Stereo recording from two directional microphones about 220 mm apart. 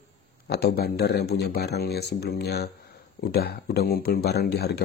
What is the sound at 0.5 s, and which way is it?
Speech, 45° left (ahead or behind).